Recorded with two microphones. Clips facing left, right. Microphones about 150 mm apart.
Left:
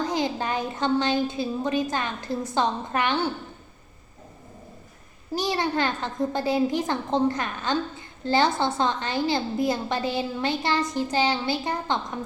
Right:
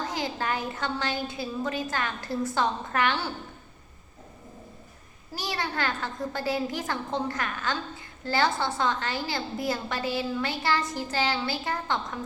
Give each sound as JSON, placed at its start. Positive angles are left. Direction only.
{"t": 0.1, "sound": "a woman's voice", "side_deg": 20}
{"t": 5.3, "sound": "a woman's voice", "side_deg": 20}